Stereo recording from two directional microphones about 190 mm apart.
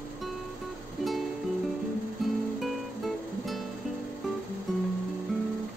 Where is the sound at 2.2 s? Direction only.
Centre (ahead or behind).